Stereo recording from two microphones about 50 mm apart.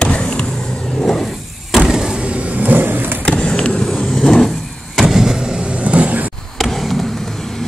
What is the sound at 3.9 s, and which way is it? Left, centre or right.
Vehicle, centre.